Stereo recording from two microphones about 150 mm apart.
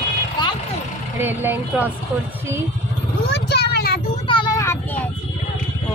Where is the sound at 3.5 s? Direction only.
90° left.